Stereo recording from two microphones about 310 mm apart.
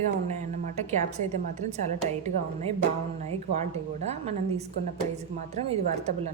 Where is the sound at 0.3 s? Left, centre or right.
Right.